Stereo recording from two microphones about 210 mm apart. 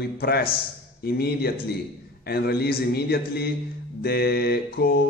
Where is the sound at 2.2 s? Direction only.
50° left (ahead or behind).